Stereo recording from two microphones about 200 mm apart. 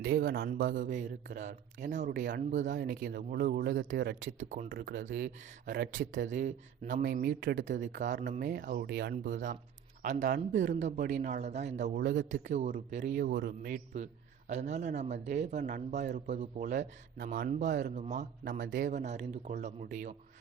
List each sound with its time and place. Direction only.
0.0 s speech: 50° right (ahead or behind)
9.3 s speech: 40° right (ahead or behind)
13.1 s speech: 50° right (ahead or behind)
13.9 s speech: 35° right (ahead or behind)
18.6 s speech: 60° right (ahead or behind)
18.9 s speech: 35° right (ahead or behind)